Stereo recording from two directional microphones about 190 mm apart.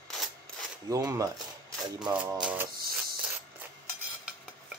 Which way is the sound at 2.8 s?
50° right (ahead or behind).